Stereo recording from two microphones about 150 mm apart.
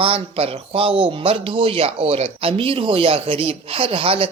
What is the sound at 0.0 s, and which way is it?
A man's voice, 40° right (ahead or behind).